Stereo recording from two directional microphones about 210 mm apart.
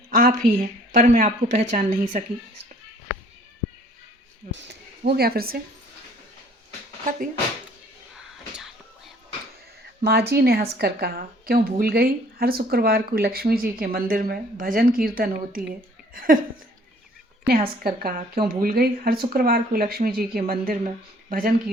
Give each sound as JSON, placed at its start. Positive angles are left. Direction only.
{"t": 0.1, "sound": "speech", "side_deg": -45}
{"t": 4.5, "sound": "speech", "side_deg": -50}
{"t": 8.1, "sound": "whispering", "side_deg": 0}
{"t": 10.0, "sound": "speech", "side_deg": -50}
{"t": 17.4, "sound": "speech", "side_deg": -45}